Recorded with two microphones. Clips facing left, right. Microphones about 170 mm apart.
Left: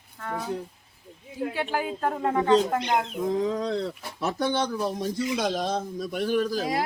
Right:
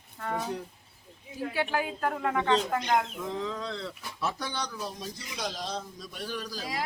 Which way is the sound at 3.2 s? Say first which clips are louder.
Left 8 dB; 45° left (ahead or behind).